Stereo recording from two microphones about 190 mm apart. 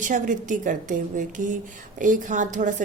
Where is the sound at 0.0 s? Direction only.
40° right (ahead or behind).